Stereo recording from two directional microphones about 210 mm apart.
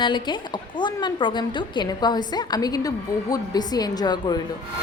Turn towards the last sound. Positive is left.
turn(degrees=20)  # may be behind; listen again after turning